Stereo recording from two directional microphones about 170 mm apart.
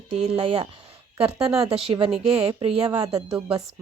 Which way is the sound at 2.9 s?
20° right (ahead or behind).